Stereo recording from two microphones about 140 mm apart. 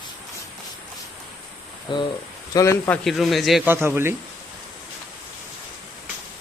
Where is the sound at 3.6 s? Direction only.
15° right (ahead or behind).